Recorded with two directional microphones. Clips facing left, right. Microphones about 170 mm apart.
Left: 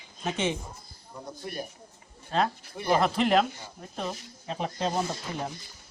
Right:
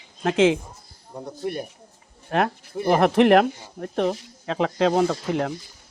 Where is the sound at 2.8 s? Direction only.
55° right (ahead or behind).